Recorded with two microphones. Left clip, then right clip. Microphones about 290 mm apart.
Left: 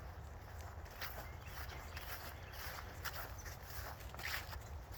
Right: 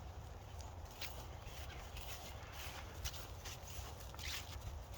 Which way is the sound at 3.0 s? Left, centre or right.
Centre.